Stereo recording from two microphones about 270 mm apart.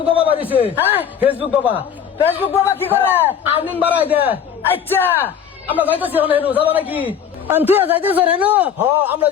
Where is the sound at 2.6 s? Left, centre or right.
Centre.